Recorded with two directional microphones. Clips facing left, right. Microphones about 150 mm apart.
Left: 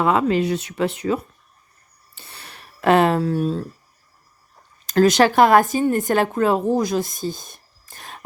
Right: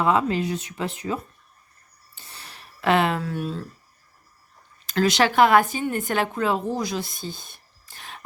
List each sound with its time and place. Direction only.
0.0 s speech: 65° left (ahead or behind)
2.1 s a sound: 65° left (ahead or behind)
2.8 s speech: 40° left (ahead or behind)
4.9 s a woman's voice: 45° left (ahead or behind)